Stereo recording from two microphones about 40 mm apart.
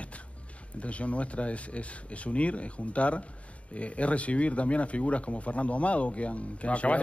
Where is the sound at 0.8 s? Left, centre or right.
Left.